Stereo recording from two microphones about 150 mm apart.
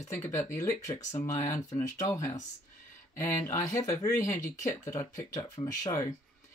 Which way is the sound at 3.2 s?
20° left (ahead or behind).